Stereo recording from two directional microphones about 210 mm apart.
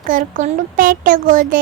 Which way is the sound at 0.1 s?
40° right (ahead or behind).